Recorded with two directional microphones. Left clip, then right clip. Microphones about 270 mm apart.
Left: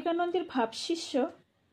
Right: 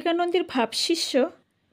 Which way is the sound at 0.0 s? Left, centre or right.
Right.